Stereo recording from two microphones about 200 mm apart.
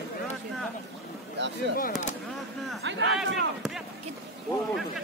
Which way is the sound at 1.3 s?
60° right (ahead or behind).